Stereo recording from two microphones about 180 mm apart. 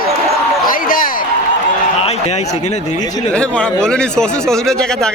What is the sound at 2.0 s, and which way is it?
Speech, 35° left (ahead or behind).